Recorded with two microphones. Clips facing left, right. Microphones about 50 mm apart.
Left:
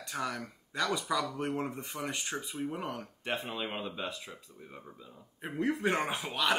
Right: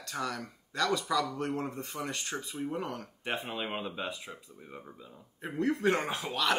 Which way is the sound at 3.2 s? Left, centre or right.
Centre.